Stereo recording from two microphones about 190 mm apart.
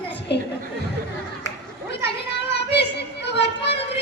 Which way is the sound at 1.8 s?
60° left (ahead or behind).